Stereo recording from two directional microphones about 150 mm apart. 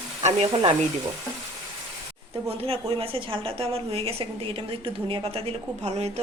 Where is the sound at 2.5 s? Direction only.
40° right (ahead or behind).